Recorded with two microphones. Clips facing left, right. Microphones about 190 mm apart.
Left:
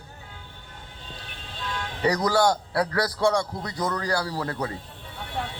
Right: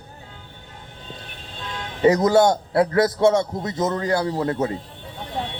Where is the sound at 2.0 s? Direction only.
25° right (ahead or behind).